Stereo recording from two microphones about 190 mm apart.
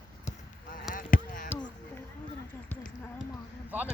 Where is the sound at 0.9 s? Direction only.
45° left (ahead or behind).